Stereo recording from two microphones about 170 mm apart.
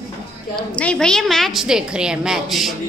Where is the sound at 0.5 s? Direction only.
5° left (ahead or behind).